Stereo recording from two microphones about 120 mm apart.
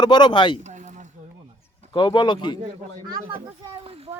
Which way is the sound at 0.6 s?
75° right (ahead or behind).